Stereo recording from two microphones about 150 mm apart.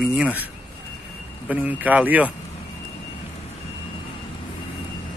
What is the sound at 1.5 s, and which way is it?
Speech, 10° right (ahead or behind).